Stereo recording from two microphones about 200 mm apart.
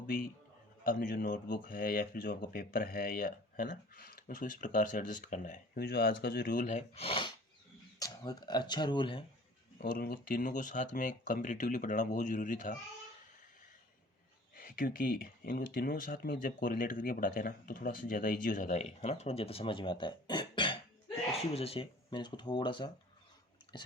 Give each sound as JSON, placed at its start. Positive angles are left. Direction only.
{"t": 0.9, "sound": "speech", "side_deg": 45}
{"t": 9.8, "sound": "speech", "side_deg": 50}
{"t": 14.5, "sound": "speech", "side_deg": 45}